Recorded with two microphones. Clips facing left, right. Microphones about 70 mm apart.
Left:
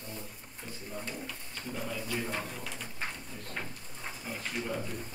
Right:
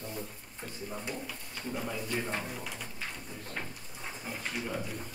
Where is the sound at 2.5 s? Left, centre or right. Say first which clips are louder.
Right 1 dB; centre.